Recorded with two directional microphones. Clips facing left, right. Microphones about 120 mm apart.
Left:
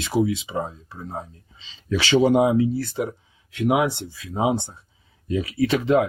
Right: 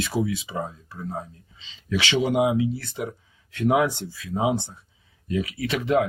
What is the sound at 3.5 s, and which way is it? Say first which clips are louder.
Speech: even; 15° left (ahead or behind).